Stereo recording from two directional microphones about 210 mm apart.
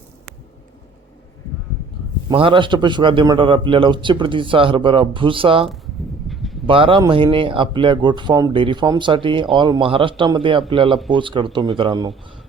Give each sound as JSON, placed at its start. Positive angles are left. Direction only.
{"t": 2.3, "sound": "a man's voice", "side_deg": -25}
{"t": 5.6, "sound": "a sound", "side_deg": 0}
{"t": 6.7, "sound": "a man's voice", "side_deg": -25}